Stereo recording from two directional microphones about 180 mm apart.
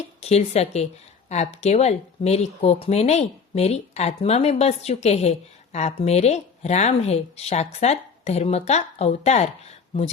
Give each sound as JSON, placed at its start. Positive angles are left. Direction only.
{"t": 0.2, "sound": "speech", "side_deg": 35}